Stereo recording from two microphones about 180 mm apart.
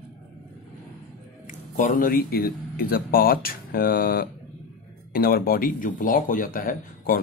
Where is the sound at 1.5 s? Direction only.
45° left (ahead or behind).